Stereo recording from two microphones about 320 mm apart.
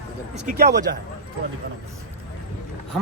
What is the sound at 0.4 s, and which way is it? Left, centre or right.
Speech, right.